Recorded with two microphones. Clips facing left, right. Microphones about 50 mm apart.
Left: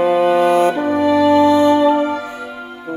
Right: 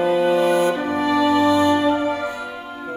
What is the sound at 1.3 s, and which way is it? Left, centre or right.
Music, left.